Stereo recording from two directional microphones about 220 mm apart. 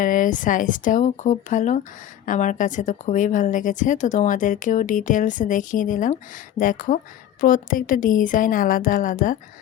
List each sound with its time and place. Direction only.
0.0 s a woman's voice: 40° left (ahead or behind)